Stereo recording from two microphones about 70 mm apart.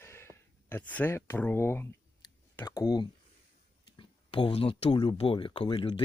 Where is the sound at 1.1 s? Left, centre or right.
Left.